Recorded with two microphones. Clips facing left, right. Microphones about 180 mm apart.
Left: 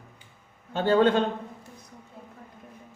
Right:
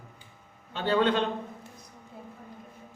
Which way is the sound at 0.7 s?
45° left (ahead or behind).